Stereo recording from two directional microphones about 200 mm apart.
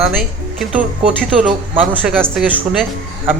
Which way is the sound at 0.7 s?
5° right (ahead or behind).